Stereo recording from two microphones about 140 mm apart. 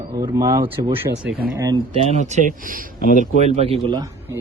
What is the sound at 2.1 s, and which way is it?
Speech, 55° right (ahead or behind).